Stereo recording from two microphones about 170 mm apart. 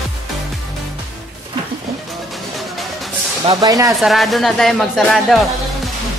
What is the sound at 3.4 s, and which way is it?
Speech, 20° right (ahead or behind).